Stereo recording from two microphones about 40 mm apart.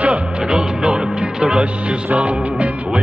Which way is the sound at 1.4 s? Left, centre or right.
Right.